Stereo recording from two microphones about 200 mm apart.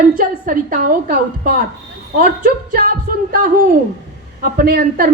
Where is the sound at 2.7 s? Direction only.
45° right (ahead or behind).